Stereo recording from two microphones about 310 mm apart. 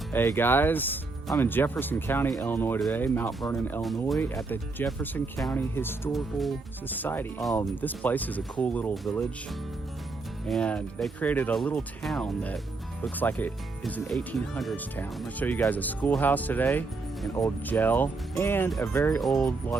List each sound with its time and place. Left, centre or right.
0.1 s speech: centre
10.4 s speech: centre